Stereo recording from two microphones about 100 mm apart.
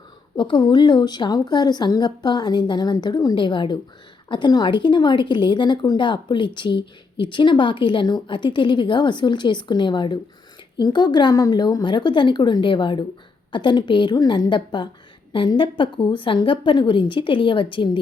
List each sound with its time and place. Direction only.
0.3 s a woman's voice: 50° left (ahead or behind)
3.3 s a woman's voice: 55° left (ahead or behind)